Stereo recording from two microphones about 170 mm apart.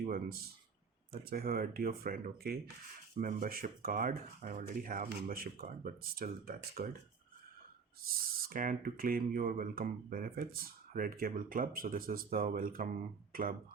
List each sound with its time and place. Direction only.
0.0 s a sound: 60° right (ahead or behind)
1.1 s speech: 60° right (ahead or behind)
8.0 s speech: 55° right (ahead or behind)